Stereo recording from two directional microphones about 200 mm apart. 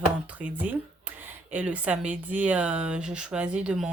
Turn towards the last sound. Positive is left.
turn(degrees=-5)  # may be behind; listen again after turning